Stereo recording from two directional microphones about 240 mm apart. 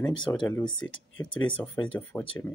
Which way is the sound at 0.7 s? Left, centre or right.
Left.